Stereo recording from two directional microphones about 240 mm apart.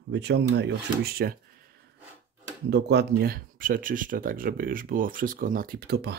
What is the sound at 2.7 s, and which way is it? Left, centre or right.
Speech, right.